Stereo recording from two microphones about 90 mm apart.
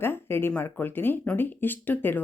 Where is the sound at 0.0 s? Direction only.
25° left (ahead or behind).